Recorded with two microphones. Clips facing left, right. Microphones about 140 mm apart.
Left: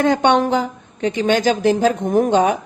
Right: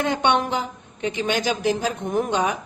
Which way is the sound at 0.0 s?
45° left (ahead or behind).